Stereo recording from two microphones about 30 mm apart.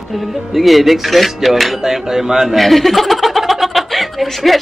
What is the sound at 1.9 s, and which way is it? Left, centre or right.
Speech, centre.